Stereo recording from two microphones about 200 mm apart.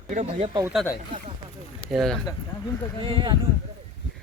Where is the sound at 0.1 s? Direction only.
35° right (ahead or behind).